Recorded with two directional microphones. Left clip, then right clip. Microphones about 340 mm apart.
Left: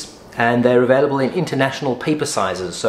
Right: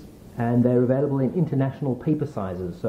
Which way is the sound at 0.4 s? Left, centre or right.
Centre.